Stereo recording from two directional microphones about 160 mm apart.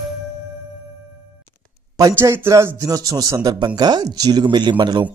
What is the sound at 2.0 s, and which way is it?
Speech, 20° right (ahead or behind).